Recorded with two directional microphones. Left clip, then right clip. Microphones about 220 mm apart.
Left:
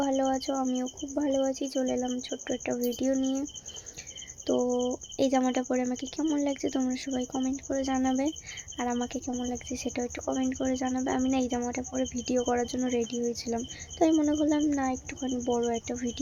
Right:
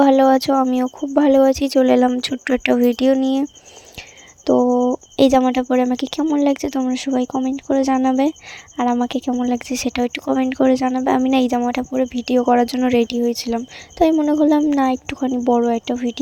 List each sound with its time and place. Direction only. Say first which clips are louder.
0.0 s speech: right 15 dB; 40° right (ahead or behind)
4.4 s speech: right 12 dB; 35° right (ahead or behind)